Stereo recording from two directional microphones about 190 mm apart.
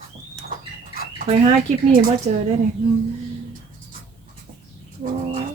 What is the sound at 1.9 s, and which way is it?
Speech, 45° right (ahead or behind).